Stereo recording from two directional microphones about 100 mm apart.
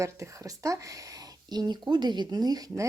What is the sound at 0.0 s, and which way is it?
Speech, 30° right (ahead or behind).